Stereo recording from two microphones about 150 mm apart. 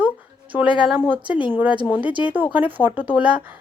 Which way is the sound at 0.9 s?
10° right (ahead or behind).